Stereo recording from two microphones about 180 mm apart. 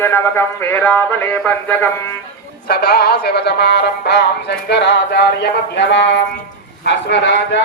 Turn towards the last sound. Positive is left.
turn(degrees=80)